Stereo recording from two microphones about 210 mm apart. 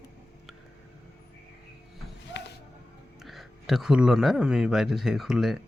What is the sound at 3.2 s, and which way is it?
Speech, centre (ahead or behind).